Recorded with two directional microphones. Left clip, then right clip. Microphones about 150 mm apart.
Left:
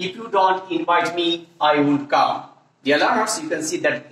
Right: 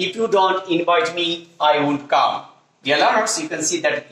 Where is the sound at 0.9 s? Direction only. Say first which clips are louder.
Left 1 dB; 55° right (ahead or behind).